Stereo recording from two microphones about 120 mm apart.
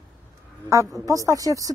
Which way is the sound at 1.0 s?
25° right (ahead or behind).